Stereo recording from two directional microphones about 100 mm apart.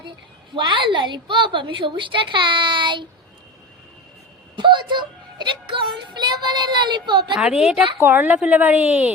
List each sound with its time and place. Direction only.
0.5 s a woman's voice: 55° right (ahead or behind)
4.5 s a woman's voice: 50° right (ahead or behind)
7.3 s a woman's voice: 10° right (ahead or behind)